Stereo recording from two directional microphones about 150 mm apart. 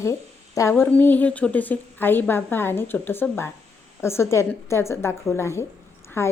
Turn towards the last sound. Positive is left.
turn(degrees=15)  # may be behind; listen again after turning